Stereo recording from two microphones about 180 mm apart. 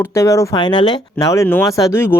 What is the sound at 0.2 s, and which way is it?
Speech, 15° left (ahead or behind).